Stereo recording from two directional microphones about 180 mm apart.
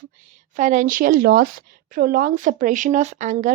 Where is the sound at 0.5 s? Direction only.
45° right (ahead or behind).